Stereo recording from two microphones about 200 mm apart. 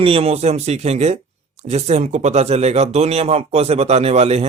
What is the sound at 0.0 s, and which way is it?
Speech, 30° right (ahead or behind).